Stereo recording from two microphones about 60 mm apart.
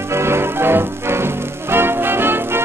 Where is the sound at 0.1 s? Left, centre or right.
Right.